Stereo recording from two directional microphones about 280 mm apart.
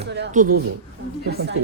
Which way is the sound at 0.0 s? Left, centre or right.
Right.